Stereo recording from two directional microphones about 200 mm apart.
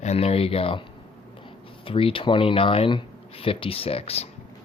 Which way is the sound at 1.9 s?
25° left (ahead or behind).